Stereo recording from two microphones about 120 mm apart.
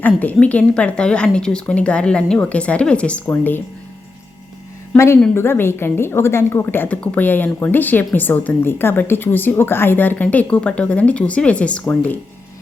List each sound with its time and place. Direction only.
0.0 s a woman's voice: 15° left (ahead or behind)
4.9 s a woman's voice: 20° left (ahead or behind)